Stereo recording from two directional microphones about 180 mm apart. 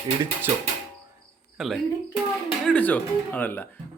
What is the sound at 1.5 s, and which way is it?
Speech, centre (ahead or behind).